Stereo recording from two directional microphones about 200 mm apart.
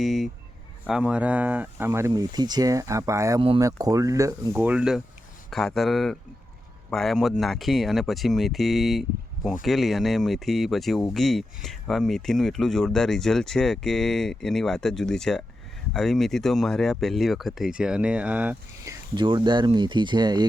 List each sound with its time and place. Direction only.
0.0 s a sound: centre (ahead or behind)
0.9 s speech: 5° right (ahead or behind)
3.4 s speech: 25° right (ahead or behind)
3.7 s speech: 15° right (ahead or behind)
19.1 s speech: 25° right (ahead or behind)